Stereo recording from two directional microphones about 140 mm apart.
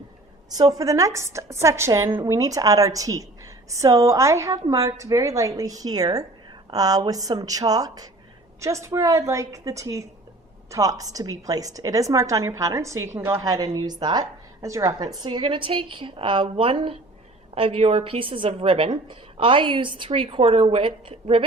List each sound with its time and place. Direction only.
0.5 s a woman's voice: 25° right (ahead or behind); by 21.4 s 45° right (ahead or behind)